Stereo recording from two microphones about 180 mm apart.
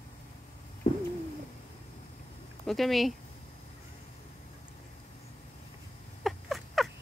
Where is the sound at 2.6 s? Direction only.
Centre (ahead or behind).